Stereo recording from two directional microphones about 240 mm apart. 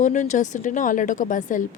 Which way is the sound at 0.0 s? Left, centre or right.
Left.